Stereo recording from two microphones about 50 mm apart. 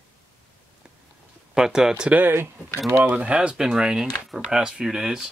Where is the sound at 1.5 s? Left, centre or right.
Centre.